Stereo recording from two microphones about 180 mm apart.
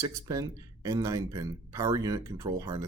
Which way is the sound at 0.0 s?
20° right (ahead or behind).